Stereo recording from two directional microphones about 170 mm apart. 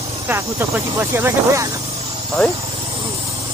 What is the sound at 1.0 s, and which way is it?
Speech, 15° right (ahead or behind).